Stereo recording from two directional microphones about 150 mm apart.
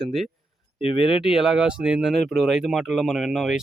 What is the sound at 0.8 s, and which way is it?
Speech, 35° left (ahead or behind).